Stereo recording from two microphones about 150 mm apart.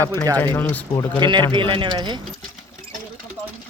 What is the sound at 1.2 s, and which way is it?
Speech, 30° right (ahead or behind).